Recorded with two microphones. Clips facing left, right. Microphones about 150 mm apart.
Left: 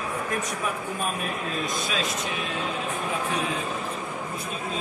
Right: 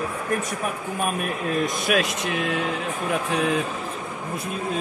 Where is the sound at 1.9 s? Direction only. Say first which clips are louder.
Right 6 dB; 70° right (ahead or behind).